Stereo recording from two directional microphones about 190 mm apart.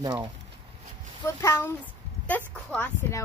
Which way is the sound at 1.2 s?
15° left (ahead or behind).